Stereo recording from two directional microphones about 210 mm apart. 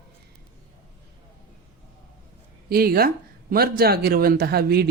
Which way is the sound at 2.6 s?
45° right (ahead or behind).